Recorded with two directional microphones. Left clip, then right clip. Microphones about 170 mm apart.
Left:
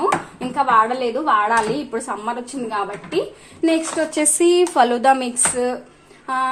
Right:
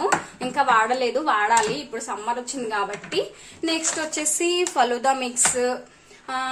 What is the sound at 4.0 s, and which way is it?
Speech, 30° left (ahead or behind).